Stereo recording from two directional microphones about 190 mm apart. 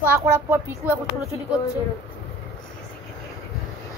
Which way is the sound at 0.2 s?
15° right (ahead or behind).